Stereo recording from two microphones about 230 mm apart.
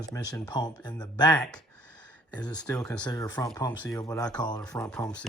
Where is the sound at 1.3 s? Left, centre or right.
Centre.